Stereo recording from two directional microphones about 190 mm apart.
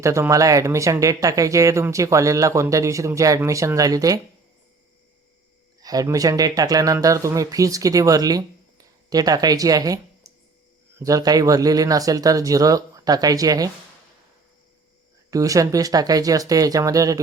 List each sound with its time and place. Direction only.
0.0 s speech: 15° right (ahead or behind)
5.8 s speech: 20° right (ahead or behind)
15.3 s speech: 15° right (ahead or behind)